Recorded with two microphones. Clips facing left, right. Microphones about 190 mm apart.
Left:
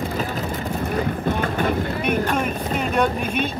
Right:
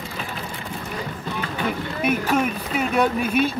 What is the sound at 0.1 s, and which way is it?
Vehicle, 40° left (ahead or behind).